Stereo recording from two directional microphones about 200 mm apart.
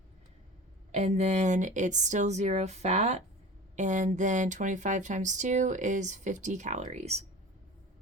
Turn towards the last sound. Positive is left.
turn(degrees=-35)  # may be behind; listen again after turning